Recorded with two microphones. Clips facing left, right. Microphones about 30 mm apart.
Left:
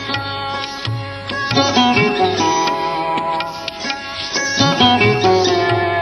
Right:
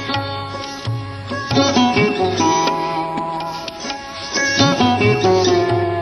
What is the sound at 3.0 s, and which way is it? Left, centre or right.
Music, left.